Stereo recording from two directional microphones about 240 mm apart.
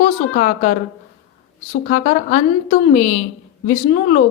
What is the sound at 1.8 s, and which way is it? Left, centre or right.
A woman's voice, left.